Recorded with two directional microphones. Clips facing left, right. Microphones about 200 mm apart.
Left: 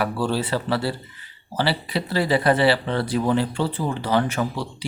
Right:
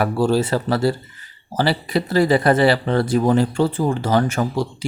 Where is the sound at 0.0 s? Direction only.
45° right (ahead or behind).